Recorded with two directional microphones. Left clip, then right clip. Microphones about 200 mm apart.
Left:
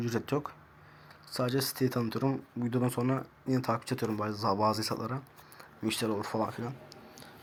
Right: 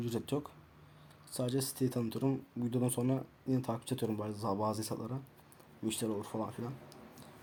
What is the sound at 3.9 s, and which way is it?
Speech, 20° left (ahead or behind).